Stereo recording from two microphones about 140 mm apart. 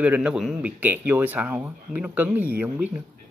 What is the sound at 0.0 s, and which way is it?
Speech, 10° right (ahead or behind).